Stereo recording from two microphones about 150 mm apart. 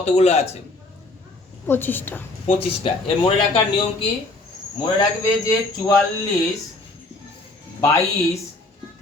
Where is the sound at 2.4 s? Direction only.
40° left (ahead or behind).